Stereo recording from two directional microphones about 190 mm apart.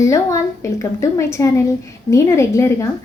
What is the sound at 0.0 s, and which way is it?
Speech, 15° left (ahead or behind).